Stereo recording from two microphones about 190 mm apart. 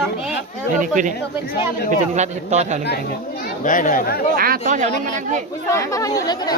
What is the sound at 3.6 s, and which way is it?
Speech, 45° left (ahead or behind).